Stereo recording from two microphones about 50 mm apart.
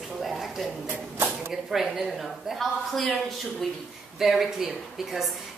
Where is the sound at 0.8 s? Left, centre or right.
Right.